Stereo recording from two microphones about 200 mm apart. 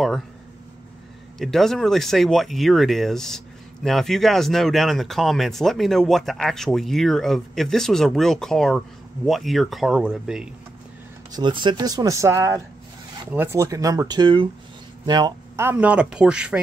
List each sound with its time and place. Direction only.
1.4 s speech: centre (ahead or behind)
11.3 s speech: 25° right (ahead or behind); by 16.6 s 5° right (ahead or behind)